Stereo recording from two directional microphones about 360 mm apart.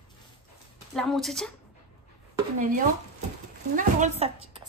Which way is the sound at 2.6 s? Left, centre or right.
Right.